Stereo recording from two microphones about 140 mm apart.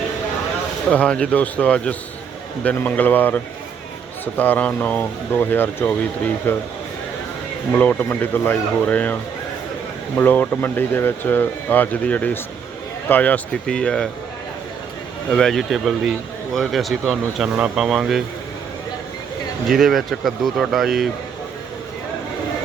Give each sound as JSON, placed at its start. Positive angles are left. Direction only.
{"t": 0.9, "sound": "speech", "side_deg": 10}
{"t": 7.7, "sound": "speech", "side_deg": 10}
{"t": 10.2, "sound": "speech", "side_deg": 15}
{"t": 15.3, "sound": "speech", "side_deg": 5}
{"t": 19.7, "sound": "speech", "side_deg": 0}